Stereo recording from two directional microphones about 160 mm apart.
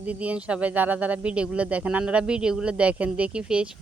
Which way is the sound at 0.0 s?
10° right (ahead or behind).